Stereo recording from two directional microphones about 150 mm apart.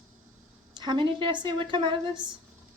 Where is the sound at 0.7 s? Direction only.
30° right (ahead or behind).